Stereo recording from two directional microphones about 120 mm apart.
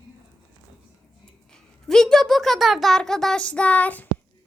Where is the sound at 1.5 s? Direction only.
5° left (ahead or behind).